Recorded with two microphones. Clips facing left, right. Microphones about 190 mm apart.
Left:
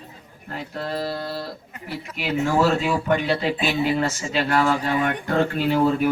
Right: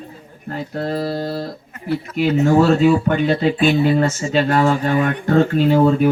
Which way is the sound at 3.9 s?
40° right (ahead or behind).